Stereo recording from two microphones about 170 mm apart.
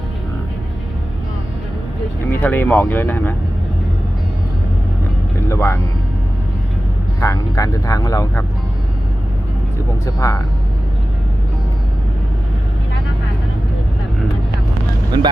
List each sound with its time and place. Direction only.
2.4 s speech: 10° left (ahead or behind)
5.5 s speech: 15° left (ahead or behind)
7.2 s speech: 20° left (ahead or behind)
10.1 s speech: 20° left (ahead or behind)
15.1 s speech: 25° right (ahead or behind)